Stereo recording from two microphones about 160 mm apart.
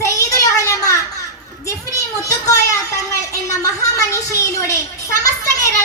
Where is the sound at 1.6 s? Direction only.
20° left (ahead or behind).